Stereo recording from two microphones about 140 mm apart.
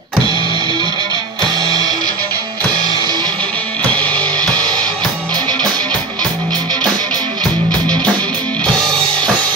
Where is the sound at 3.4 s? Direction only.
10° left (ahead or behind).